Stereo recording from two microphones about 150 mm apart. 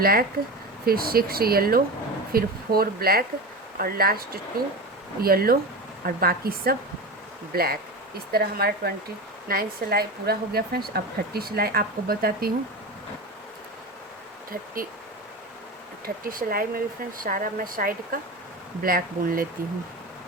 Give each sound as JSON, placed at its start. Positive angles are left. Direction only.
{"t": 0.0, "sound": "speech", "side_deg": -85}
{"t": 16.0, "sound": "speech", "side_deg": -70}